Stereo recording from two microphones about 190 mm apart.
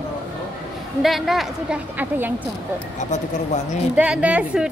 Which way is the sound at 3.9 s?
5° right (ahead or behind).